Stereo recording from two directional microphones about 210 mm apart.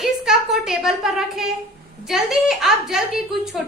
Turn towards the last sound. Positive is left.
turn(degrees=0)  # may be behind; listen again after turning